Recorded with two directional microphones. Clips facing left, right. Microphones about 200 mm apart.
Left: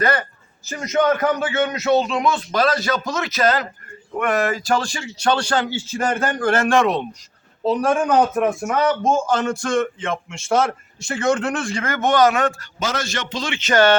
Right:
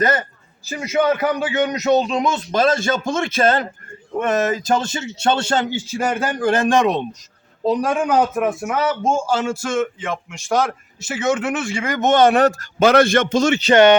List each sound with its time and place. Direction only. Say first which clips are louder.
0.0 s a man's voice: right 1 dB; 20° right (ahead or behind); by 12.6 s 40° right (ahead or behind)
12.8 s a man's voice: right 12 dB; 60° right (ahead or behind); by 13.7 s 40° right (ahead or behind)